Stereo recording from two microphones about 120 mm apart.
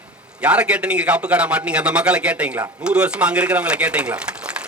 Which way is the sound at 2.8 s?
10° right (ahead or behind).